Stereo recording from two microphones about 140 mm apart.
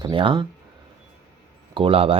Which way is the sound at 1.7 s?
40° right (ahead or behind).